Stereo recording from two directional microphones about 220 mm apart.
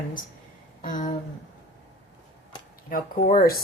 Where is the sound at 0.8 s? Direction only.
35° left (ahead or behind).